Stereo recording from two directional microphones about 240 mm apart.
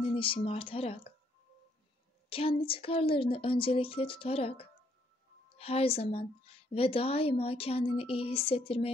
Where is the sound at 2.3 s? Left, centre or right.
Left.